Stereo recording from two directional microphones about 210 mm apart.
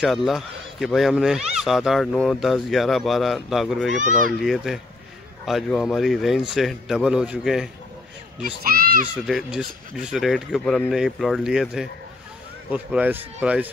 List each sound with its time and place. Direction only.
0.0 s speech: centre (ahead or behind)
8.4 s speech: 45° right (ahead or behind)
9.2 s speech: centre (ahead or behind)